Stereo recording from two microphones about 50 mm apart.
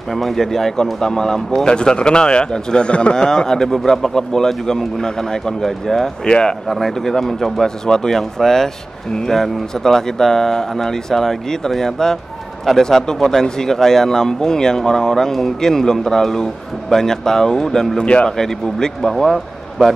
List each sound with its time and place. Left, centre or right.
0.1 s speech: centre
18.0 s speech: left
18.4 s speech: centre